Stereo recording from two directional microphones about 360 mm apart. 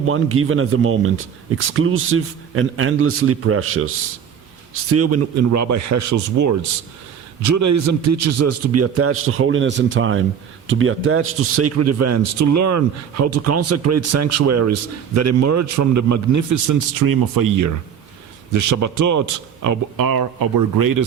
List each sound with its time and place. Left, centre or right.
0.0 s a man's voice: right
18.5 s speech: right